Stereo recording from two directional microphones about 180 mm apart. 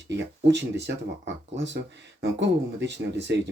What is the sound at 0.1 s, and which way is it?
Speech, 75° right (ahead or behind).